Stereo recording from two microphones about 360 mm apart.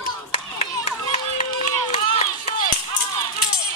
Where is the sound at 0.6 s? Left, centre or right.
Centre.